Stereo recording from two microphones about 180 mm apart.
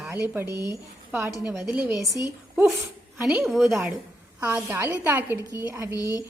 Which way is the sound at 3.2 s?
5° right (ahead or behind).